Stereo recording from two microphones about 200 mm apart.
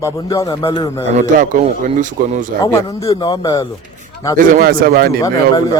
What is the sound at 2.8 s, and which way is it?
Speech, 25° left (ahead or behind).